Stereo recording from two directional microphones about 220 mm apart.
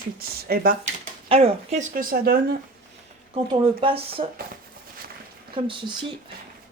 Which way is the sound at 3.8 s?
25° right (ahead or behind).